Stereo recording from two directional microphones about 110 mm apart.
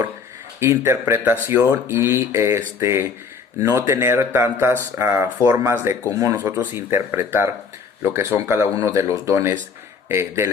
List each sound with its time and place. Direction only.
0.9 s speech: 25° right (ahead or behind)